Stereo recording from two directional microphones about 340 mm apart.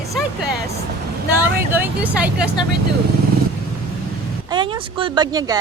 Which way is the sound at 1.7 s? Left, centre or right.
Centre.